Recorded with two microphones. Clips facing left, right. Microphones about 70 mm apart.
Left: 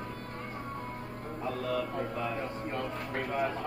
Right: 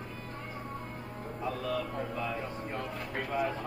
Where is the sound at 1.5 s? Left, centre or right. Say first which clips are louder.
Left 2 dB; left.